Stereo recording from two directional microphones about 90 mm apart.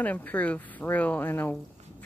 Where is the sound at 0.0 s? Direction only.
15° left (ahead or behind).